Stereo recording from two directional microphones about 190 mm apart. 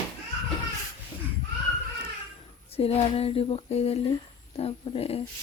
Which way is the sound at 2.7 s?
30° left (ahead or behind).